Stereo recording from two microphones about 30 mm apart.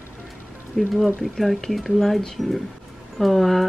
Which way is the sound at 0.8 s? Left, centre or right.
Centre.